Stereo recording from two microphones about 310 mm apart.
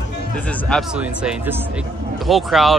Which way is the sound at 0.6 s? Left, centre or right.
Centre.